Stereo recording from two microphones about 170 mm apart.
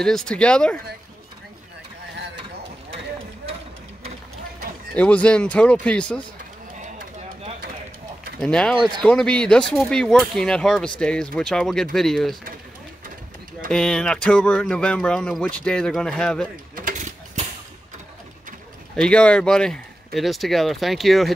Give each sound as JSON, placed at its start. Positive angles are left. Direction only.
{"t": 0.0, "sound": "speech", "side_deg": 5}
{"t": 4.9, "sound": "speech", "side_deg": 10}
{"t": 6.8, "sound": "a sound", "side_deg": -40}
{"t": 8.4, "sound": "speech", "side_deg": 5}
{"t": 13.7, "sound": "speech", "side_deg": 5}
{"t": 16.7, "sound": "mechanisms", "side_deg": -50}
{"t": 18.9, "sound": "speech", "side_deg": 5}